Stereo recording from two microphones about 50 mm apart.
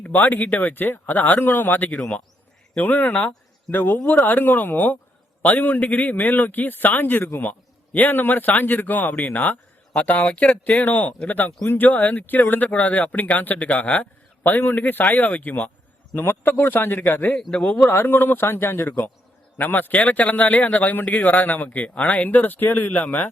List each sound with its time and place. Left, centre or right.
0.0 s speech: left
2.7 s a man's voice: left
16.4 s speech: left
18.4 s speech: left